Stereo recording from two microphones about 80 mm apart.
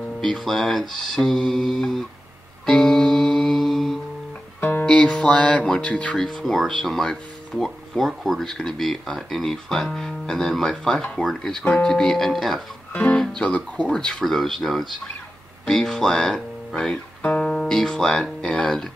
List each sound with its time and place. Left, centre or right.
0.2 s speech: centre
2.6 s music: centre
4.6 s music: left
4.8 s speech: centre
6.1 s speech: centre
17.2 s speech: centre